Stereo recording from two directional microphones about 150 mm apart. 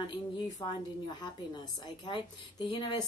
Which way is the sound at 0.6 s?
35° left (ahead or behind).